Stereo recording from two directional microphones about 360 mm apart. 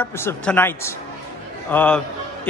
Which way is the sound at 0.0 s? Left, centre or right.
Centre.